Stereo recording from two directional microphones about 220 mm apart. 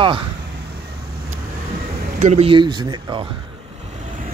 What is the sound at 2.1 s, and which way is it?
Speech, 30° right (ahead or behind).